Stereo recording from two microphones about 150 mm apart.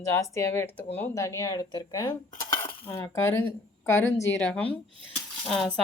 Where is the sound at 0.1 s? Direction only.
20° left (ahead or behind).